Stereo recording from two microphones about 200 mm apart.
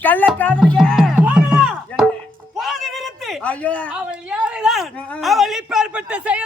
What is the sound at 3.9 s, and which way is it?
Speech, 5° right (ahead or behind).